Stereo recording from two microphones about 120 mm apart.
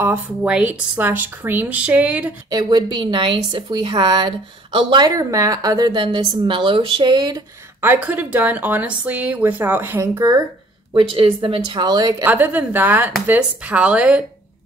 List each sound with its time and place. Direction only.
0.0 s a woman's voice: 10° right (ahead or behind)
2.5 s a woman's voice: 35° right (ahead or behind)
5.1 s a woman's voice: 25° right (ahead or behind)
7.8 s a woman's voice: 15° right (ahead or behind)
10.9 s a woman's voice: 45° right (ahead or behind)
12.3 s a woman's voice: 15° right (ahead or behind)